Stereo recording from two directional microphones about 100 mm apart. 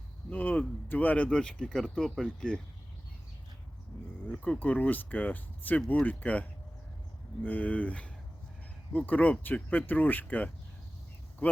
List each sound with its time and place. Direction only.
0.3 s speech: 15° left (ahead or behind)
4.3 s speech: 15° left (ahead or behind)